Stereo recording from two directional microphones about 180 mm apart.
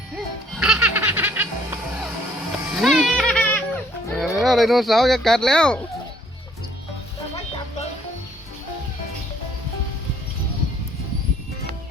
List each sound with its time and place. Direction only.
0.5 s music: 5° right (ahead or behind)
4.1 s speech: centre (ahead or behind)